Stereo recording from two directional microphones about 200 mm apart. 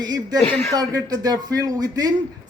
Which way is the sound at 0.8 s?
20° right (ahead or behind).